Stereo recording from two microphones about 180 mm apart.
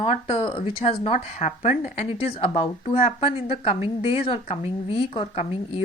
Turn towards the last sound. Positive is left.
turn(degrees=35)  # may be behind; listen again after turning